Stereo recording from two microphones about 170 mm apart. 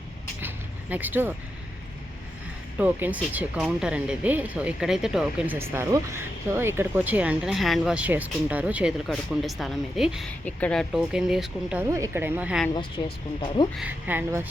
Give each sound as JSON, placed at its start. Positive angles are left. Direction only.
{"t": 0.4, "sound": "a sound", "side_deg": -10}
{"t": 2.7, "sound": "speech", "side_deg": -10}
{"t": 11.8, "sound": "speech", "side_deg": -20}
{"t": 12.7, "sound": "speech", "side_deg": 25}
{"t": 13.7, "sound": "speech", "side_deg": -10}